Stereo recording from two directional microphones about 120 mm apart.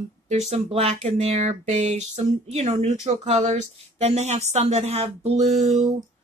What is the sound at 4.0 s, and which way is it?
Speech, 70° right (ahead or behind).